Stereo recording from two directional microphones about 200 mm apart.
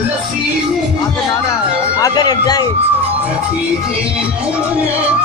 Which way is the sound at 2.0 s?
20° left (ahead or behind).